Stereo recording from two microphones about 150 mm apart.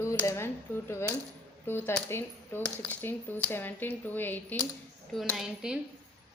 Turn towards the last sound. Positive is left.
turn(degrees=-5)  # may be behind; listen again after turning